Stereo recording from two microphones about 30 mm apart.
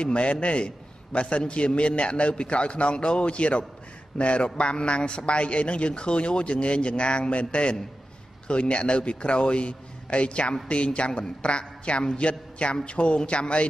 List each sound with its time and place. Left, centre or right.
0.0 s a man's voice: left